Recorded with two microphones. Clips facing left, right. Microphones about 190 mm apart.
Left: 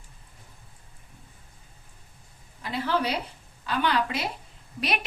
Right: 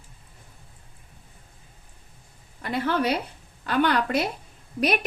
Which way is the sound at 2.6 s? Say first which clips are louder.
Right 2 dB; 55° right (ahead or behind).